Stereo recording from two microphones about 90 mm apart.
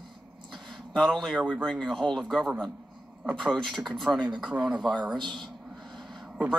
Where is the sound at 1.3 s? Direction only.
10° right (ahead or behind).